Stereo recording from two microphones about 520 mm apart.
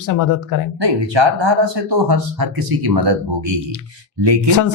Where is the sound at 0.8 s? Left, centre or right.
Right.